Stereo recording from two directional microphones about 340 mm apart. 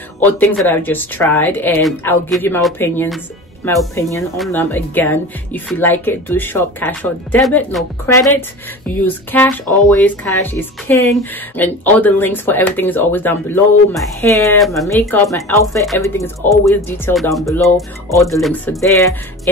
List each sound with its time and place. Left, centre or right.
0.2 s speech: centre